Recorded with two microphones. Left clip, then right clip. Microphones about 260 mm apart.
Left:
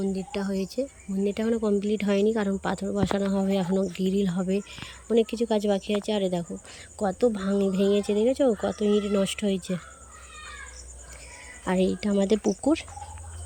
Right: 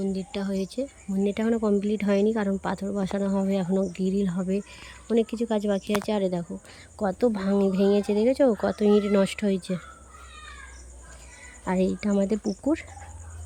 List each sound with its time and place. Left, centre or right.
0.0 s speech: centre
11.6 s speech: centre